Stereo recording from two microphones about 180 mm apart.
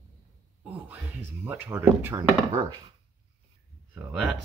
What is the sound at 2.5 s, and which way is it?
Speech, 30° right (ahead or behind).